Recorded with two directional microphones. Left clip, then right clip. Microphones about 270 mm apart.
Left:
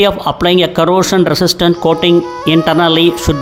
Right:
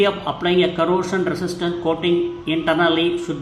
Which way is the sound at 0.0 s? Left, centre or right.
Left.